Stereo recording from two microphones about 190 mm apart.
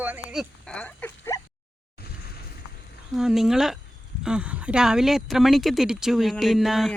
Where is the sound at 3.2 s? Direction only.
Centre (ahead or behind).